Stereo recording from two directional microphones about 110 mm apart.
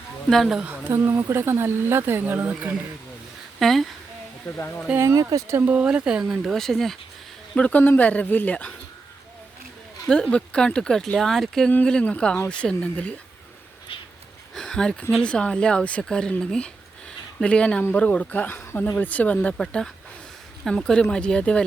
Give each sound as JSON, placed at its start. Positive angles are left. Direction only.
{"t": 0.3, "sound": "speech", "side_deg": 0}
{"t": 0.6, "sound": "speech", "side_deg": -20}
{"t": 3.6, "sound": "speech", "side_deg": 0}
{"t": 4.5, "sound": "speech", "side_deg": 20}
{"t": 4.9, "sound": "speech", "side_deg": -25}
{"t": 5.6, "sound": "speech", "side_deg": -10}
{"t": 10.1, "sound": "speech", "side_deg": 10}
{"t": 14.5, "sound": "a sound", "side_deg": 5}
{"t": 15.1, "sound": "speech", "side_deg": 10}